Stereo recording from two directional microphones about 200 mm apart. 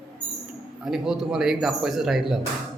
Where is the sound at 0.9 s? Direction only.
Centre (ahead or behind).